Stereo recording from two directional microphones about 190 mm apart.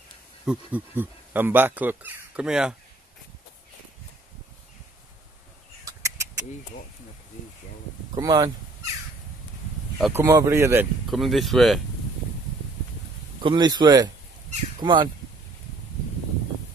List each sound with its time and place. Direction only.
0.5 s speech: 10° right (ahead or behind)
5.9 s a sound: 15° right (ahead or behind)
8.1 s speech: 20° right (ahead or behind)
9.9 s speech: 10° right (ahead or behind)
11.1 s speech: centre (ahead or behind)
13.4 s speech: 25° right (ahead or behind)